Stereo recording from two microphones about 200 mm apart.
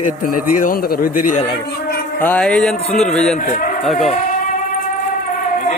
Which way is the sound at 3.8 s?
Centre (ahead or behind).